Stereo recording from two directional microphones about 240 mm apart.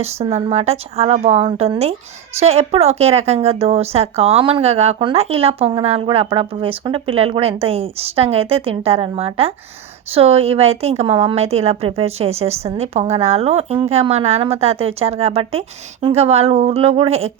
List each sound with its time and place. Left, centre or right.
0.0 s a woman's voice: right